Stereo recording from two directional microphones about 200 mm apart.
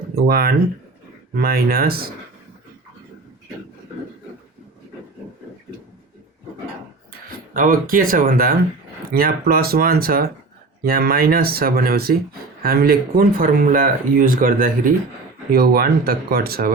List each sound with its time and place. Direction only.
0.2 s speech: 50° right (ahead or behind)
7.5 s speech: 45° right (ahead or behind)